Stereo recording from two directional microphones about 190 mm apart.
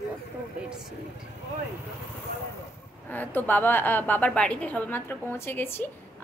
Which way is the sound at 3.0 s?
10° left (ahead or behind).